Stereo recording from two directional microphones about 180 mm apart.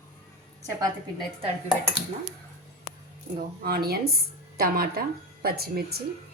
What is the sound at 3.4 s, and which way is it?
A woman's voice, 55° right (ahead or behind).